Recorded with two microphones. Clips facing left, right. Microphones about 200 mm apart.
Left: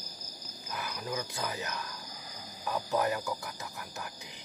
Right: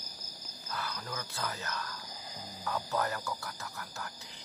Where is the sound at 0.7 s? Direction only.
15° left (ahead or behind).